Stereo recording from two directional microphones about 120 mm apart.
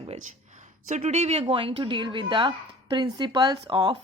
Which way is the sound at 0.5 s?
90° right.